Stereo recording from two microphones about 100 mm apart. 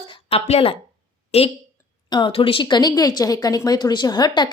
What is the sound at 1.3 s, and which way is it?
Speech, 90° left.